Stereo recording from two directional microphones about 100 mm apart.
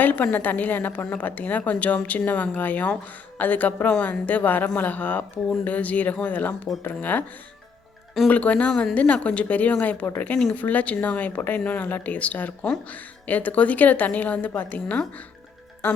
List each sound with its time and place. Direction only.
0.0 s a woman's voice: 15° left (ahead or behind)
8.3 s a woman's voice: 15° left (ahead or behind)